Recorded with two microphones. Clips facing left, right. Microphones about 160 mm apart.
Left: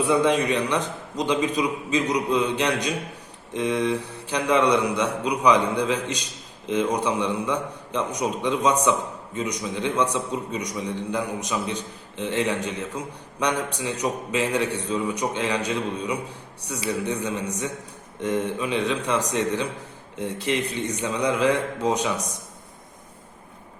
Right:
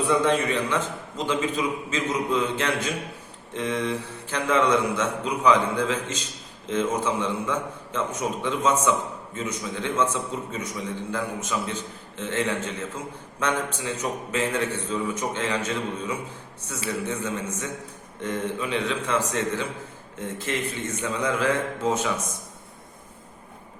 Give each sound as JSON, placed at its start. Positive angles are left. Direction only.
{"t": 0.1, "sound": "a man's voice", "side_deg": 15}